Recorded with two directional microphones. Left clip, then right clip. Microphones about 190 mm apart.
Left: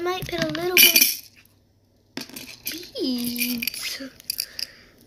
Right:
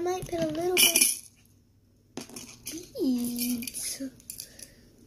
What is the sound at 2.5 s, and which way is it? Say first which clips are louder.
Coin: left 7 dB; 25° left (ahead or behind).